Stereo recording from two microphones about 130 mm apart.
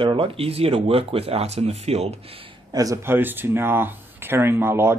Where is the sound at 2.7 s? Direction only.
25° right (ahead or behind).